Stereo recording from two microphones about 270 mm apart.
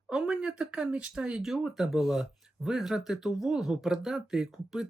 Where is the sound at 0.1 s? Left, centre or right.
Centre.